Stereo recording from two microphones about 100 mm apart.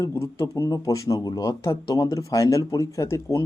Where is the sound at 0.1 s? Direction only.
30° left (ahead or behind).